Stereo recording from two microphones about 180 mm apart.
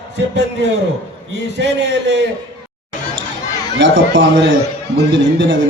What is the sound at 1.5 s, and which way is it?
Speech, 75° right (ahead or behind).